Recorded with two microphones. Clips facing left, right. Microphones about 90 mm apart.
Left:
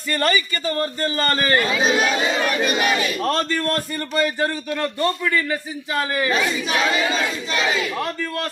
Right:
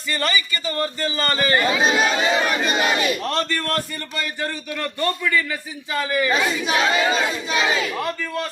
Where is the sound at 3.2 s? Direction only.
40° left (ahead or behind).